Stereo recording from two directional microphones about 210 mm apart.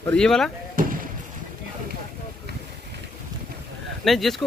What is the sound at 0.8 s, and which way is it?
Basketball bounce, 40° right (ahead or behind).